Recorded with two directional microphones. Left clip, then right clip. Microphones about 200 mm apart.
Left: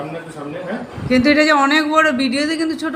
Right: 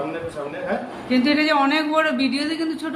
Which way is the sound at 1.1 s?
20° left (ahead or behind).